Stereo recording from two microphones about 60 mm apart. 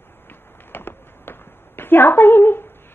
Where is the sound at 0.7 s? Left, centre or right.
Left.